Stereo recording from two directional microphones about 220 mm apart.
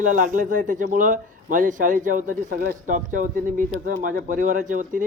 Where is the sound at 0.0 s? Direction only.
35° right (ahead or behind).